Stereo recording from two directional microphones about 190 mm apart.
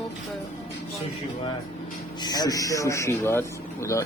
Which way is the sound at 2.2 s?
20° left (ahead or behind).